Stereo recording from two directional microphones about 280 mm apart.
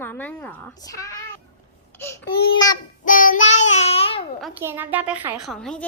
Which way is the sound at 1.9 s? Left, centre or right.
Centre.